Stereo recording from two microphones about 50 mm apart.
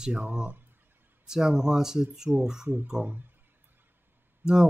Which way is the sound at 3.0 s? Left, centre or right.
Right.